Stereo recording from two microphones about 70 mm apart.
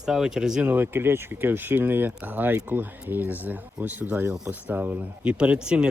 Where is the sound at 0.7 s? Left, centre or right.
Right.